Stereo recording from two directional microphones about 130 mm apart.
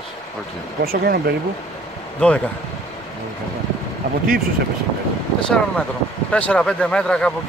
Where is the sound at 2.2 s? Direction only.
10° left (ahead or behind).